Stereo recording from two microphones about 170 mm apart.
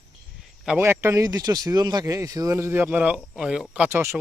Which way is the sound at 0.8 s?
15° right (ahead or behind).